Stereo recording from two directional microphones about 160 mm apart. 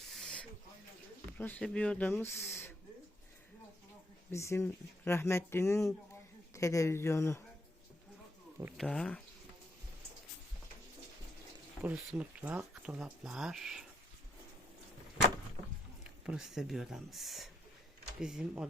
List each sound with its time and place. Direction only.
0.1 s a sound: 5° left (ahead or behind)
1.4 s speech: 10° left (ahead or behind)
4.3 s speech: 15° left (ahead or behind)
8.8 s speech: 5° left (ahead or behind)
11.8 s speech: 10° right (ahead or behind)
16.2 s speech: 5° right (ahead or behind)